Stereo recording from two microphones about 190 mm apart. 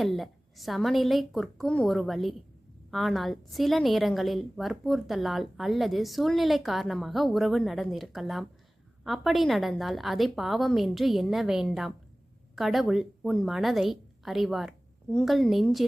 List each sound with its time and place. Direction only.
0.0 s a woman's voice: centre (ahead or behind)